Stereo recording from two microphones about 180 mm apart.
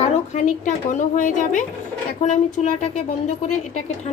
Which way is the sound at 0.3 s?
40° left (ahead or behind).